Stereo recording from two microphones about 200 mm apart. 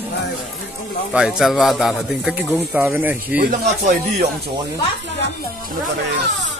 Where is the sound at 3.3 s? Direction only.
45° right (ahead or behind).